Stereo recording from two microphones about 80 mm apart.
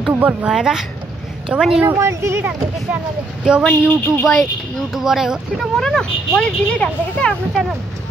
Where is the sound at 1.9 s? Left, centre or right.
Right.